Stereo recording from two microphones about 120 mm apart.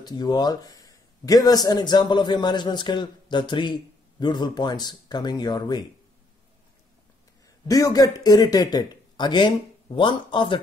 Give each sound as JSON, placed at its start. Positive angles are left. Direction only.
{"t": 0.0, "sound": "a man's voice", "side_deg": 35}
{"t": 7.6, "sound": "a man's voice", "side_deg": 30}